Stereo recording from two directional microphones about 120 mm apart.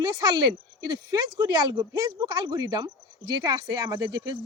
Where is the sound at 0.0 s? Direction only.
35° right (ahead or behind).